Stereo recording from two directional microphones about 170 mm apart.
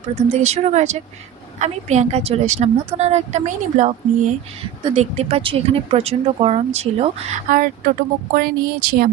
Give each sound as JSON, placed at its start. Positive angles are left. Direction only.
{"t": 0.2, "sound": "speech", "side_deg": -40}
{"t": 4.9, "sound": "speech", "side_deg": -35}